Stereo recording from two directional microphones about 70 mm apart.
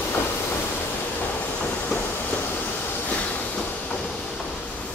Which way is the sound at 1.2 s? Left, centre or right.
Left.